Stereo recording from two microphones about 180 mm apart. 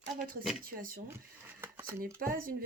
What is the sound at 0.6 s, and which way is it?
Speech, 50° right (ahead or behind).